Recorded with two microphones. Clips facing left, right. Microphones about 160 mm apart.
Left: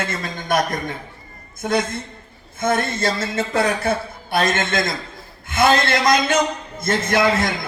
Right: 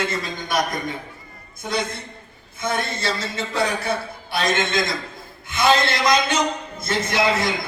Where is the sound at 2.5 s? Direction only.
50° left (ahead or behind).